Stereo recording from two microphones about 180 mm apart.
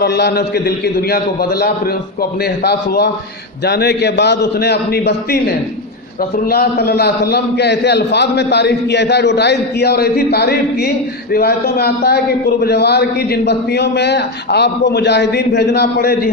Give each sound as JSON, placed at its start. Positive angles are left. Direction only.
{"t": 0.0, "sound": "a man's voice", "side_deg": 65}